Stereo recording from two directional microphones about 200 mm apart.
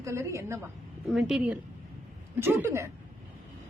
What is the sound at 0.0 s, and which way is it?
Speech, 15° right (ahead or behind).